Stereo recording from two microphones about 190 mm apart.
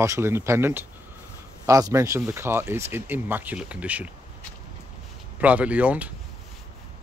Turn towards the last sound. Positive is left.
turn(degrees=-5)  # may be behind; listen again after turning